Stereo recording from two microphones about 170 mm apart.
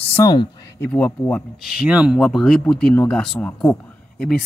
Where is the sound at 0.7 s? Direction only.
10° left (ahead or behind).